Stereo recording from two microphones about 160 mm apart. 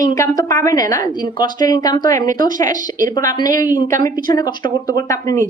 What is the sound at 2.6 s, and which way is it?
Speech, 55° right (ahead or behind).